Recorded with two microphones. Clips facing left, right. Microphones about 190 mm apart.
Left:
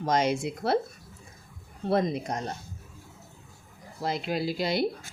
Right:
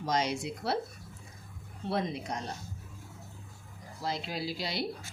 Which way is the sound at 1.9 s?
45° left (ahead or behind).